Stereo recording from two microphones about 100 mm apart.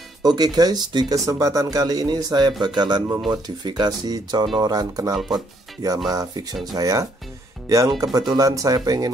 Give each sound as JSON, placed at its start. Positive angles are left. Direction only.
{"t": 0.2, "sound": "speech", "side_deg": -40}
{"t": 5.1, "sound": "speech", "side_deg": 0}
{"t": 6.0, "sound": "speech", "side_deg": -40}